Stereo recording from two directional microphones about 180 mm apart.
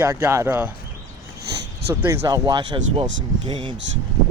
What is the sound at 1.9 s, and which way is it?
Speech, 15° right (ahead or behind).